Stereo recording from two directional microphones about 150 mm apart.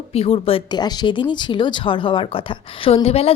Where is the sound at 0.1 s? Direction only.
40° left (ahead or behind).